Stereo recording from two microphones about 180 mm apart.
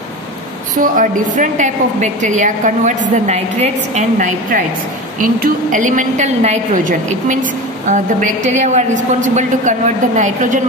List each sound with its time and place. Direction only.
0.7 s a woman's voice: 45° right (ahead or behind)